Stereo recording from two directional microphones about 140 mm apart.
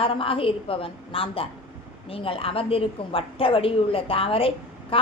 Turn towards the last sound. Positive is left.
turn(degrees=40)  # may be behind; listen again after turning